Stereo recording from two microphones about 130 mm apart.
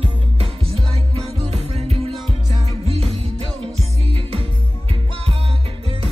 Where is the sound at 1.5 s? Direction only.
55° right (ahead or behind).